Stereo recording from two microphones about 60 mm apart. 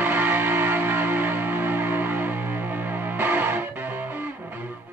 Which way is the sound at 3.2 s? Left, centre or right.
Right.